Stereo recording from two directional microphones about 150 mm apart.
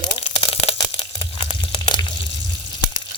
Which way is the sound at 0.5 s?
45° left (ahead or behind).